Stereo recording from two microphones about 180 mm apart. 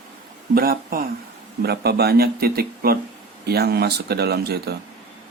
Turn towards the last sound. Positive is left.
turn(degrees=-65)  # may be behind; listen again after turning